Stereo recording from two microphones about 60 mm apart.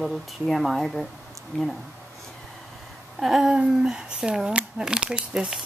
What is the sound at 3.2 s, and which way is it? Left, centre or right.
Speech, centre.